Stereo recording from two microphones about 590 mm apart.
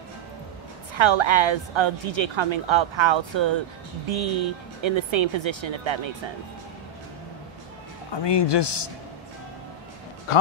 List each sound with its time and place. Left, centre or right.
0.9 s a woman's voice: right
8.1 s a man's voice: left